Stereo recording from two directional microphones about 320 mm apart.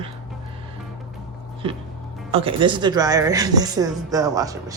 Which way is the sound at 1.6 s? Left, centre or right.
Centre.